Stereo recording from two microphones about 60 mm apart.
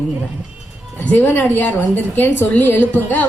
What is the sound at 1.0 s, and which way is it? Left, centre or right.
A woman's voice, left.